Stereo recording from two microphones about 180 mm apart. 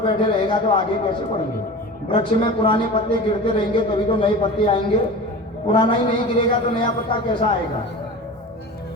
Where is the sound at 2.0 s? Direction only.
30° left (ahead or behind).